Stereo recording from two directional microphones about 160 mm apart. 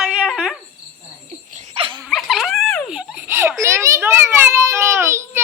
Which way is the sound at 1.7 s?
35° right (ahead or behind).